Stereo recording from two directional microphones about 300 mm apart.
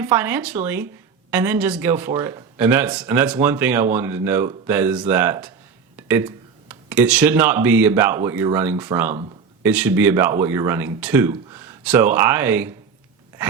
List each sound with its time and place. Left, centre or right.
0.0 s speech: centre